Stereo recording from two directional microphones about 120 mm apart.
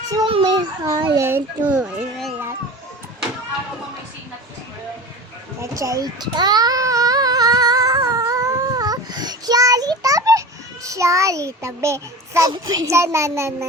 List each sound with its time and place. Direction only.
0.3 s a child's voice: 45° right (ahead or behind)
1.1 s a child's voice: 20° right (ahead or behind)
5.5 s baby cry: 25° right (ahead or behind)
10.8 s a child's voice: 25° right (ahead or behind)